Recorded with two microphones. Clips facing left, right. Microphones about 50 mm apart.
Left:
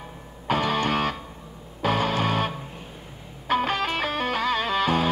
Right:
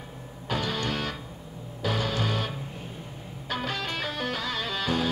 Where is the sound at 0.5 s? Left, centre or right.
Left.